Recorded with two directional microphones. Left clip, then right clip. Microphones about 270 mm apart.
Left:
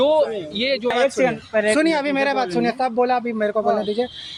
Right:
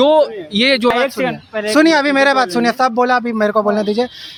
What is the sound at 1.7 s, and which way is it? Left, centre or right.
Speech, right.